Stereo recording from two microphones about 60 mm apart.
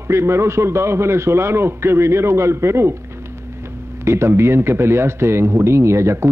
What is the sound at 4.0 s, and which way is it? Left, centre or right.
A man's voice, right.